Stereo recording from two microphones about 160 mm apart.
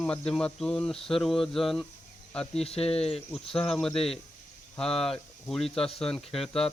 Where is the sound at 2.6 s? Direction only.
40° left (ahead or behind).